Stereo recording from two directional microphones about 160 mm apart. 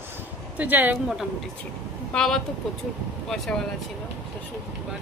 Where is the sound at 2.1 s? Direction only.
5° left (ahead or behind).